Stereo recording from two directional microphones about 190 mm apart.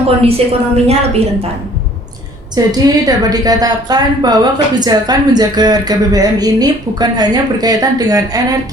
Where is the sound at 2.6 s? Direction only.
20° right (ahead or behind).